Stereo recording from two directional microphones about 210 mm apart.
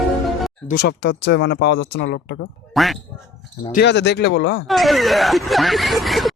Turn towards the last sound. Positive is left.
turn(degrees=0)  # may be behind; listen again after turning